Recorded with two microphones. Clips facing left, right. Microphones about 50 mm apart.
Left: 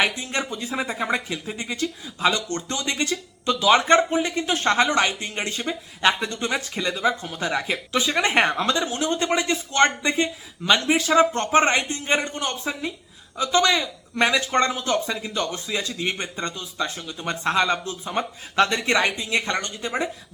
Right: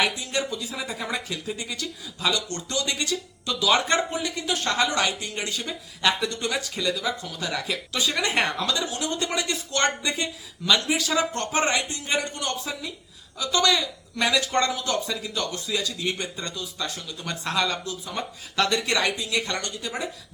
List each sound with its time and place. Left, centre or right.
0.0 s speech: left